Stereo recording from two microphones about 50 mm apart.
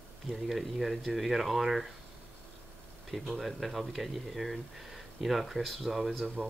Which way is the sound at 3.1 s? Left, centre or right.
Centre.